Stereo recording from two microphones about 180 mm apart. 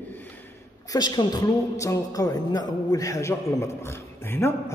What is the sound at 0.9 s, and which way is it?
A man's voice, 20° left (ahead or behind).